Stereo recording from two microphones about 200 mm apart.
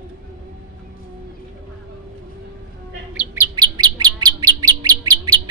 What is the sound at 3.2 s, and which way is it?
Bird, 15° right (ahead or behind).